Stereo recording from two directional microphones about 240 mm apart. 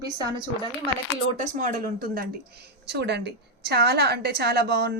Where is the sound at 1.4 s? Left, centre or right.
Right.